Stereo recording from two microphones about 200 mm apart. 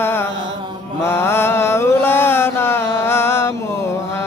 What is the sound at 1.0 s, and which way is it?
Mantra, 10° left (ahead or behind).